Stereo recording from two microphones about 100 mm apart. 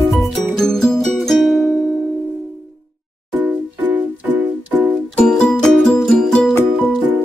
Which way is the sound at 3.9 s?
20° right (ahead or behind).